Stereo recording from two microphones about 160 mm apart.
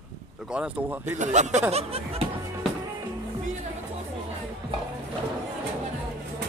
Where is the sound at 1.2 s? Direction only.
50° right (ahead or behind).